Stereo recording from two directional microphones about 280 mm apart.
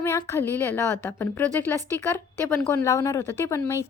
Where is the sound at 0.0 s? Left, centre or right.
Centre.